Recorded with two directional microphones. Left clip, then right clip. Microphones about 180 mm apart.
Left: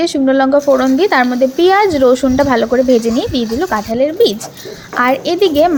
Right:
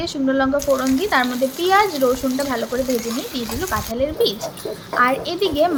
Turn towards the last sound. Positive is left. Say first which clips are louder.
# left 8 dB
turn(degrees=35)  # may be behind; listen again after turning